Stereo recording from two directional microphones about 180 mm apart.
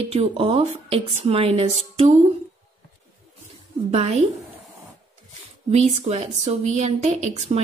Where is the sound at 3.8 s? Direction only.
35° right (ahead or behind).